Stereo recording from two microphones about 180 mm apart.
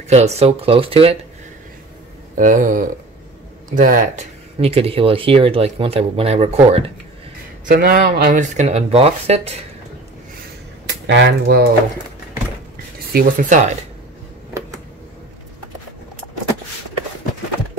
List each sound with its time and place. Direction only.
0.1 s speech: 35° right (ahead or behind)
2.3 s speech: 45° right (ahead or behind)
7.6 s speech: 55° right (ahead or behind); by 9.7 s 35° right (ahead or behind)
10.9 s speech: 80° right; by 11.7 s 60° right (ahead or behind)
13.1 s speech: 45° right (ahead or behind)